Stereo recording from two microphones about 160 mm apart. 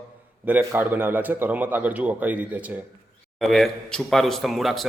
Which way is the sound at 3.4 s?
Centre (ahead or behind).